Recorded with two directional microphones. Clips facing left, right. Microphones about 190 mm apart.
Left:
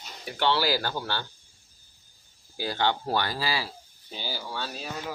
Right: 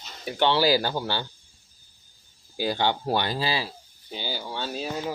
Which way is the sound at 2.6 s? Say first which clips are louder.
Right 2 dB; 15° right (ahead or behind).